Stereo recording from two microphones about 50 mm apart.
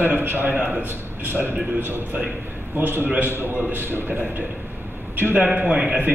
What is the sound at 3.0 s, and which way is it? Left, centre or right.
A man's voice, right.